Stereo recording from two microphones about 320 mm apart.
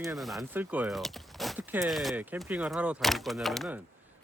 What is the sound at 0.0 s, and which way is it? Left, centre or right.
Speech, centre.